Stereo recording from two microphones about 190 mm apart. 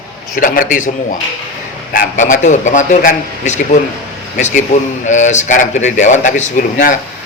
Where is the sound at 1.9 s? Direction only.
45° left (ahead or behind).